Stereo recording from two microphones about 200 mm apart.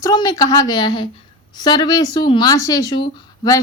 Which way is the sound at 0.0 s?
20° left (ahead or behind).